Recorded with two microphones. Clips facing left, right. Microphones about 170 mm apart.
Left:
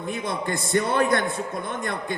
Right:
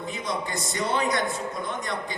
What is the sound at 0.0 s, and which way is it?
A man's voice, 55° left (ahead or behind).